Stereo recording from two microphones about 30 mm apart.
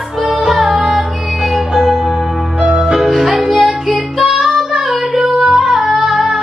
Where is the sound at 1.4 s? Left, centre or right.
Centre.